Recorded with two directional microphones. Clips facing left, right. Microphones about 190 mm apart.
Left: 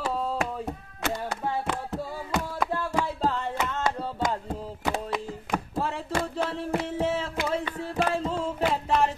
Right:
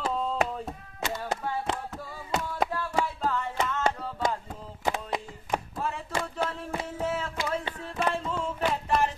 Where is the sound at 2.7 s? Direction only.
30° left (ahead or behind).